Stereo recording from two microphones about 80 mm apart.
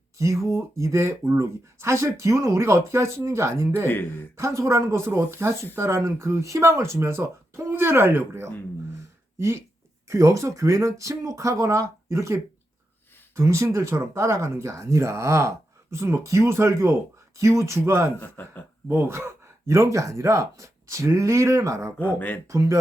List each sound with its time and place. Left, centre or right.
0.2 s speech: right
3.8 s speech: left
4.4 s speech: right
10.1 s speech: right
18.2 s speech: left
18.9 s speech: right
21.9 s speech: left
22.4 s speech: right